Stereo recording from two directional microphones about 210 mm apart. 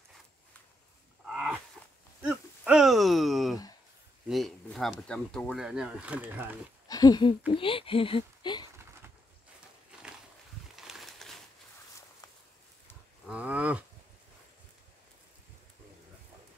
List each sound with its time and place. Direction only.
1.3 s wild animals: 5° right (ahead or behind)
2.2 s a sound: 5° right (ahead or behind)
4.3 s speech: centre (ahead or behind)
6.9 s speech: 20° left (ahead or behind)
10.8 s a sound: centre (ahead or behind)
13.3 s cattle: 5° right (ahead or behind)